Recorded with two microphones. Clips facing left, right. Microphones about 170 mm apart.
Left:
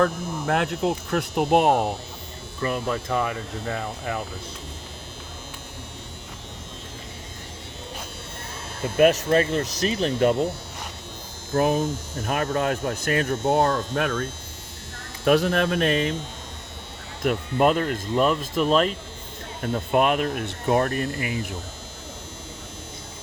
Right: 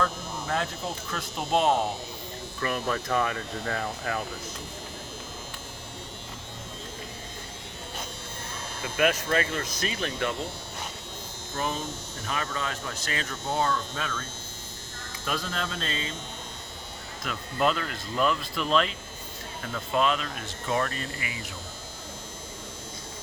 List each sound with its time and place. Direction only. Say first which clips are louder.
0.0 s speech: left 7 dB; 60° left (ahead or behind)
2.6 s hum: left 3 dB; 20° left (ahead or behind)
8.8 s speech: left 8 dB; 40° left (ahead or behind)
11.5 s speech: left 10 dB; 55° left (ahead or behind)
17.2 s speech: left 7 dB; 50° left (ahead or behind)
19.9 s speech: left 5 dB; 55° left (ahead or behind)